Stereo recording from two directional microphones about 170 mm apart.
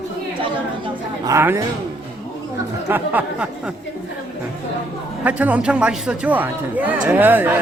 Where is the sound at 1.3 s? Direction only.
15° right (ahead or behind).